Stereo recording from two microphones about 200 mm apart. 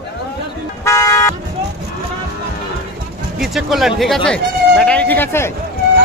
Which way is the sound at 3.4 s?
Centre (ahead or behind).